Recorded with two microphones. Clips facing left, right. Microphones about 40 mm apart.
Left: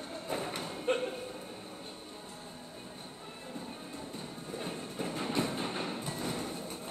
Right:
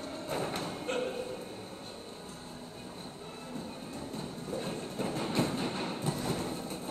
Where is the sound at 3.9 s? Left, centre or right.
Centre.